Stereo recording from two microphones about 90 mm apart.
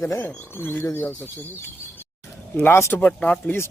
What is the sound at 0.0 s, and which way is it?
Speech, 30° left (ahead or behind).